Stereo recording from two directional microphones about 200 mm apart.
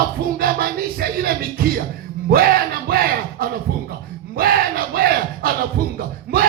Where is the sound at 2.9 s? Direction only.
50° right (ahead or behind).